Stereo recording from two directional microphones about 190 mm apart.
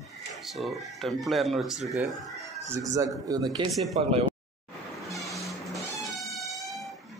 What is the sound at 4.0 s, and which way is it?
Speech, 30° right (ahead or behind).